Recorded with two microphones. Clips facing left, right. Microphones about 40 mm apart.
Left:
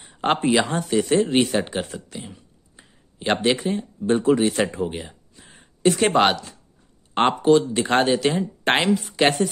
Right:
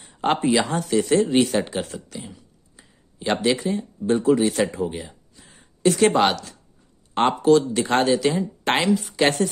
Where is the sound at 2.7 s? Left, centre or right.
Left.